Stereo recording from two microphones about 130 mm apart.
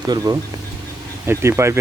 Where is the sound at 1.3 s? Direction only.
20° right (ahead or behind).